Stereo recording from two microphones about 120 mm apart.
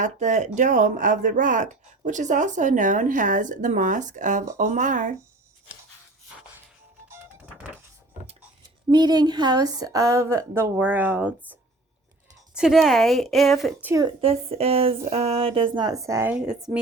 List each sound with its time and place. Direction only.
0.0 s speech: 85° right
7.1 s music: 20° right (ahead or behind)
8.9 s a woman's voice: 35° right (ahead or behind); by 11.3 s 15° right (ahead or behind)
12.5 s speech: 5° right (ahead or behind)
14.2 s speech: 55° right (ahead or behind); by 16.3 s 25° right (ahead or behind)
16.3 s a woman's voice: 5° right (ahead or behind)